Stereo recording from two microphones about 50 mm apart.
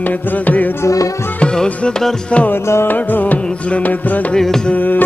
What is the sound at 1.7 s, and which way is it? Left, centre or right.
Music, left.